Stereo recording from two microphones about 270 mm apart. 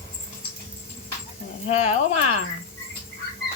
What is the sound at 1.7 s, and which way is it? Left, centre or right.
Speech, left.